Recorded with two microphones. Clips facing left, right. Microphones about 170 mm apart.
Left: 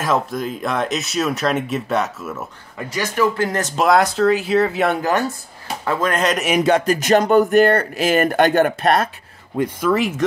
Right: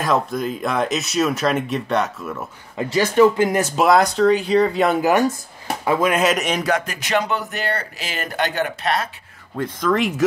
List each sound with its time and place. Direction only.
0.0 s speech: centre (ahead or behind)
2.9 s speech: 25° right (ahead or behind)
3.3 s speech: 15° right (ahead or behind); by 4.9 s 5° left (ahead or behind)
5.9 s speech: 10° right (ahead or behind)
6.6 s speech: 30° left (ahead or behind)
7.0 s speech: 45° left (ahead or behind)
9.6 s speech: 10° left (ahead or behind)